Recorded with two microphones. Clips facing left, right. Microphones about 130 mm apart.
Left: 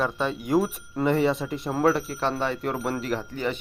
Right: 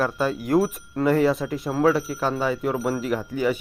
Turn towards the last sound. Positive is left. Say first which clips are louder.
# right 4 dB
turn(degrees=-10)  # may be behind; listen again after turning